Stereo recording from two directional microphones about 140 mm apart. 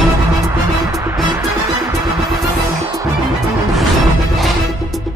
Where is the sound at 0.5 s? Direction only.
20° right (ahead or behind).